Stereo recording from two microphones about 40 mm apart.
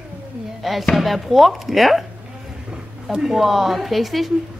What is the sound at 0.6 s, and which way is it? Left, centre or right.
Chopping, centre.